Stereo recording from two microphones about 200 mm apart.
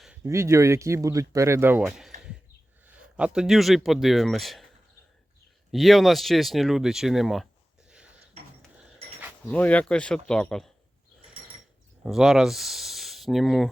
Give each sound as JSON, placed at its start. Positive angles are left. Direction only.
{"t": 0.3, "sound": "speech", "side_deg": -15}
{"t": 5.7, "sound": "speech", "side_deg": 0}
{"t": 7.9, "sound": "a sound", "side_deg": -5}
{"t": 8.4, "sound": "a sound", "side_deg": -35}
{"t": 9.5, "sound": "speech", "side_deg": 5}
{"t": 12.0, "sound": "speech", "side_deg": 0}